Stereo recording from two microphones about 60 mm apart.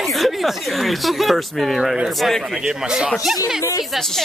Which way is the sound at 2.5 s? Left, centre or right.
Centre.